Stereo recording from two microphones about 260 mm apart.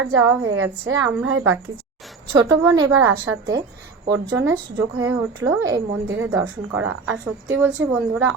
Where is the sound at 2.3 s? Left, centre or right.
Centre.